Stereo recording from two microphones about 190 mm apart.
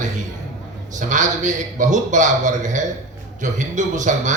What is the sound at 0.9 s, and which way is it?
A man's voice, 40° right (ahead or behind).